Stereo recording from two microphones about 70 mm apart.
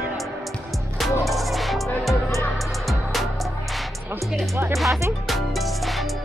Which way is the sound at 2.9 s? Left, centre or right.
Centre.